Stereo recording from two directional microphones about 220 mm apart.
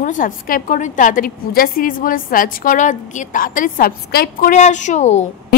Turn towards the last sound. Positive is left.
turn(degrees=30)  # may be behind; listen again after turning